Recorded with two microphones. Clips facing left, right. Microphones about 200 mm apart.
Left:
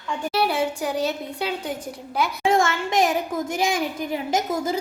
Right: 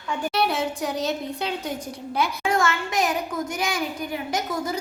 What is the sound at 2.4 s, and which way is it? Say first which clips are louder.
A woman's voice: left 5 dB; 25° left (ahead or behind).